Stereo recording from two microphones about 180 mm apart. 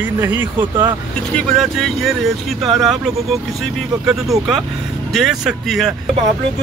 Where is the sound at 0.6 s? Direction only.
25° right (ahead or behind).